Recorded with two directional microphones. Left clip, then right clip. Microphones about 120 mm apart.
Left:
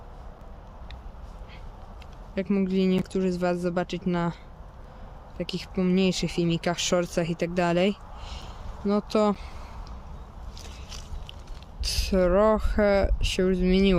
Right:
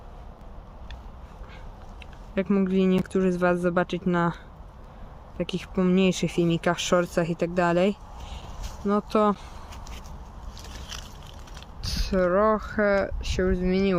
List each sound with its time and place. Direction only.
2.3 s speech: 5° left (ahead or behind)
5.4 s speech: centre (ahead or behind); by 9.4 s 20° left (ahead or behind)
11.8 s speech: 45° left (ahead or behind)